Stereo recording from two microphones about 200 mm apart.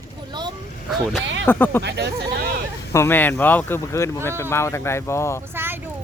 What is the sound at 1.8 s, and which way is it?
Speech, 55° right (ahead or behind).